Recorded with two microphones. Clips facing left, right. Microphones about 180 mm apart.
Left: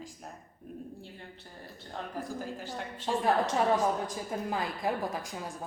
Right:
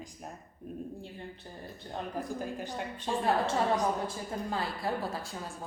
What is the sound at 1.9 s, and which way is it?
Speech, 20° right (ahead or behind).